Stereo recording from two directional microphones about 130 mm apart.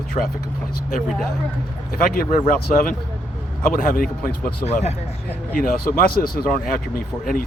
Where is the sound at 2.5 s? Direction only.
90° left; by 4.9 s 60° left (ahead or behind).